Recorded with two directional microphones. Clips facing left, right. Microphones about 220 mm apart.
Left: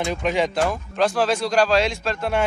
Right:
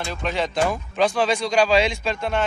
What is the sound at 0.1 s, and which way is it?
Speech, 10° left (ahead or behind).